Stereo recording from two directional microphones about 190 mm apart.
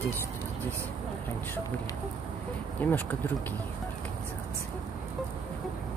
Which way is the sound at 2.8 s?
10° left (ahead or behind).